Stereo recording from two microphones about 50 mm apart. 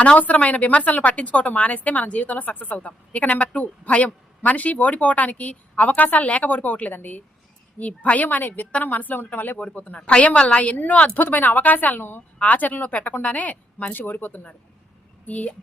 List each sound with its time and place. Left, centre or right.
0.0 s a woman's voice: left
9.6 s a woman's voice: left
12.4 s a woman's voice: left
13.9 s a woman's voice: left